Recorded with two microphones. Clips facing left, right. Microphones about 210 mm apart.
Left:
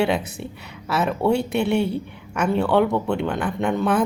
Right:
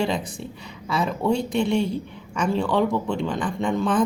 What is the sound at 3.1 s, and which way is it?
Speech, 65° left (ahead or behind).